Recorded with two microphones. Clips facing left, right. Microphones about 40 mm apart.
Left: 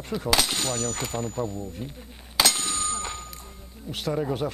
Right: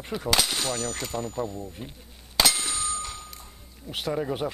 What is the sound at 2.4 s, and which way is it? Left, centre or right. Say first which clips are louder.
Clang: even; centre.